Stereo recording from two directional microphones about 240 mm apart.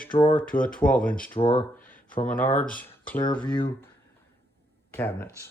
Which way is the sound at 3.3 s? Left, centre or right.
Centre.